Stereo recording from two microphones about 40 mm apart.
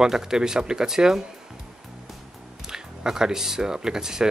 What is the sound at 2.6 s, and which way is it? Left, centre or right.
Speech, centre.